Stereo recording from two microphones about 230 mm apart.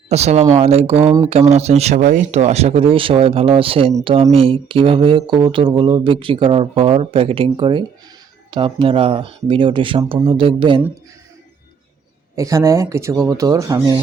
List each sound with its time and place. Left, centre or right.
0.1 s speech: right
12.4 s speech: centre